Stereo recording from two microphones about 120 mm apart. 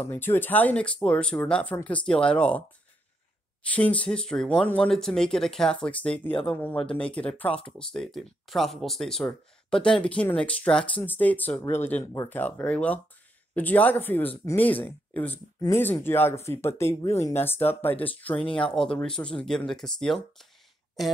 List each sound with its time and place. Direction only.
0.0 s speech: 20° left (ahead or behind)
3.6 s speech: 10° left (ahead or behind)